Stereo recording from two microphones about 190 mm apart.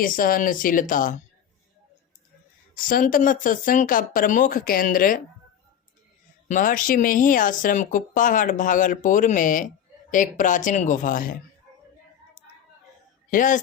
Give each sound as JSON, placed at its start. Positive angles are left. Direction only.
{"t": 0.0, "sound": "speech", "side_deg": 45}
{"t": 2.8, "sound": "speech", "side_deg": 45}
{"t": 6.5, "sound": "speech", "side_deg": 45}
{"t": 13.3, "sound": "speech", "side_deg": 45}